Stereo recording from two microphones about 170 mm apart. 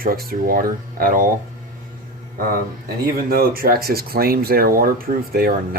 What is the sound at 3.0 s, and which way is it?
Speech, 60° right (ahead or behind).